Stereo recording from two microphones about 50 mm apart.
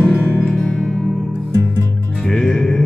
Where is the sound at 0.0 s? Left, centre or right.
Left.